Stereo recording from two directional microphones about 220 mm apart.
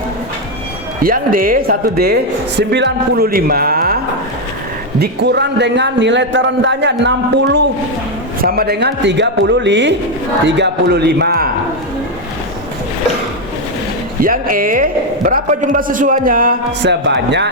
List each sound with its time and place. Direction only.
1.0 s a man's voice: 40° right (ahead or behind)
8.4 s a man's voice: 40° right (ahead or behind)
14.2 s a man's voice: 40° right (ahead or behind)